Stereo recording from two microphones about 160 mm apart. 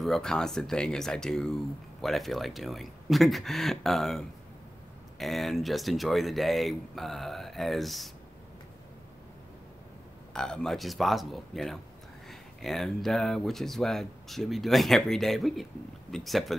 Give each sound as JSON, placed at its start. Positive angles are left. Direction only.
{"t": 0.0, "sound": "speech", "side_deg": 5}
{"t": 10.3, "sound": "speech", "side_deg": 5}